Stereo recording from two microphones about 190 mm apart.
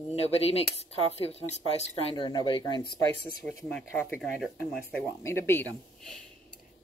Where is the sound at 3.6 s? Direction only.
5° left (ahead or behind).